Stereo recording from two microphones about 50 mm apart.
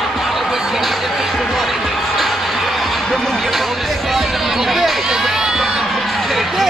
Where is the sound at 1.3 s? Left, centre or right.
Centre.